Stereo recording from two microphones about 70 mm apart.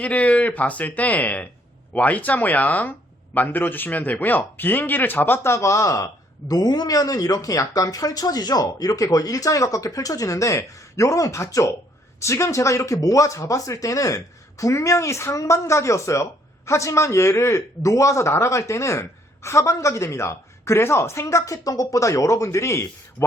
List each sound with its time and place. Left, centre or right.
0.0 s speech: left
6.5 s a man's voice: left